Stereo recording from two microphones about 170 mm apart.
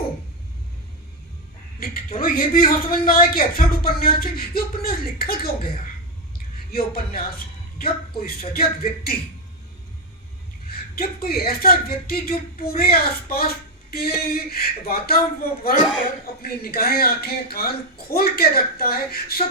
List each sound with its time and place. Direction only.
1.8 s speech: 65° left (ahead or behind)
10.7 s speech: 65° left (ahead or behind)